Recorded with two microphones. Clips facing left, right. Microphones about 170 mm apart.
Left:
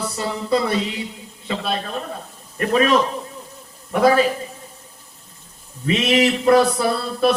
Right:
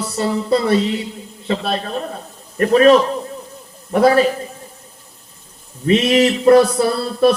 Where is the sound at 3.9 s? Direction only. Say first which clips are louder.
Right 3 dB; 45° right (ahead or behind).